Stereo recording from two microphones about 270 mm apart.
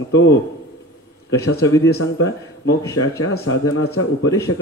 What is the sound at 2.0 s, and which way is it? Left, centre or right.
Speech, left.